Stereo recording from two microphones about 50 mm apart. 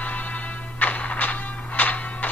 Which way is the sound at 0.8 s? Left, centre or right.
Left.